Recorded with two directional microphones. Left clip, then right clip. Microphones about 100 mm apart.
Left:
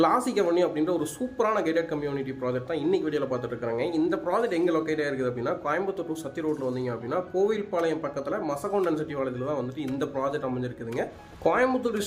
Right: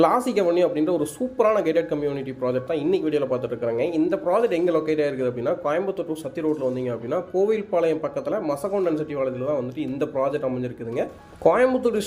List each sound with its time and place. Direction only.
0.0 s speech: 25° right (ahead or behind)
8.7 s speech: 10° right (ahead or behind)
11.7 s speech: 30° right (ahead or behind)